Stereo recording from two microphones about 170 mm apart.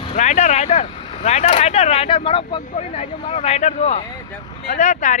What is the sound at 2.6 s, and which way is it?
Speech, 45° left (ahead or behind).